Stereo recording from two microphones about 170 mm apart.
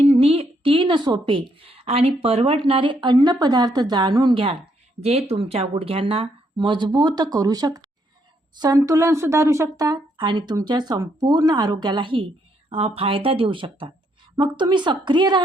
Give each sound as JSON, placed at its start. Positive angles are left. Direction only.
{"t": 0.0, "sound": "a woman's voice", "side_deg": -35}